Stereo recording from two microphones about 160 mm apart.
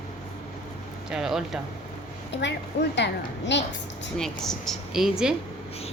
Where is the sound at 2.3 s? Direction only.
90° left.